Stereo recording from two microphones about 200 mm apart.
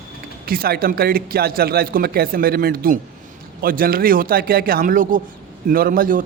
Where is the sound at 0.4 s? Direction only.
50° right (ahead or behind).